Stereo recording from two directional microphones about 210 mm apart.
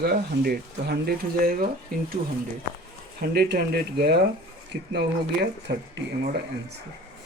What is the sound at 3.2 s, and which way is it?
Speech, 50° right (ahead or behind).